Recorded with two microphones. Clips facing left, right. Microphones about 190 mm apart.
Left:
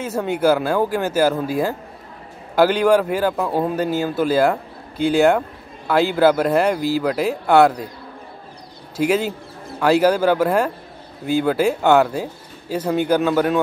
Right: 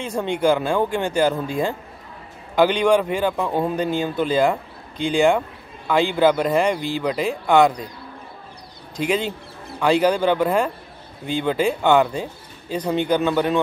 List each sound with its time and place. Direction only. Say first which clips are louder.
0.0 s speech: left 2 dB; 5° left (ahead or behind)
8.9 s speech: left 3 dB; 10° left (ahead or behind)